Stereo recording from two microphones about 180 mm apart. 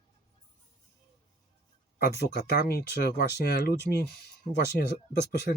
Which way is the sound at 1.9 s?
60° left (ahead or behind).